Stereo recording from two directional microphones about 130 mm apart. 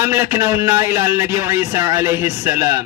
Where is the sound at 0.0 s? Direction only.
20° right (ahead or behind).